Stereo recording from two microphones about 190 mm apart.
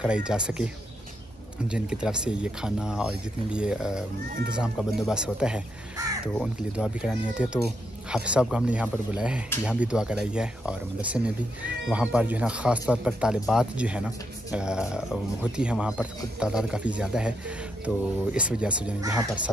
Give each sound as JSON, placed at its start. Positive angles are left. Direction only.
{"t": 0.0, "sound": "speech", "side_deg": -5}
{"t": 1.7, "sound": "speech", "side_deg": -5}
{"t": 18.9, "sound": "speech", "side_deg": -20}